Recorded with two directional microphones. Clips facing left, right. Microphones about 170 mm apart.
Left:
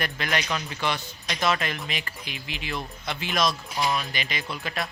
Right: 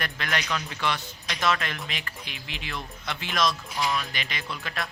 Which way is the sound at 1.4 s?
5° left (ahead or behind).